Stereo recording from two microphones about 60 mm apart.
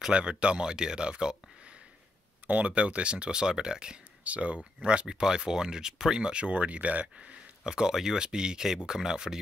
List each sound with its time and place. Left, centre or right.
0.1 s speech: centre
2.4 s speech: right
7.6 s speech: centre